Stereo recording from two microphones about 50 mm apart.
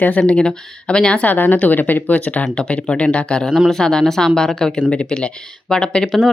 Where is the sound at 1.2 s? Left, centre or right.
Left.